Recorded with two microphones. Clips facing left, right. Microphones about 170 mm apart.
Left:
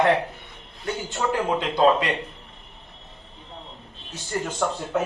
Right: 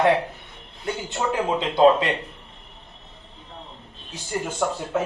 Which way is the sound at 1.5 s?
25° right (ahead or behind).